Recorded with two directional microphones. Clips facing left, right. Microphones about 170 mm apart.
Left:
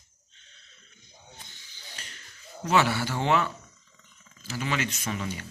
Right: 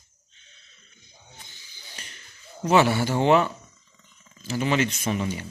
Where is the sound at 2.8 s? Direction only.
20° right (ahead or behind).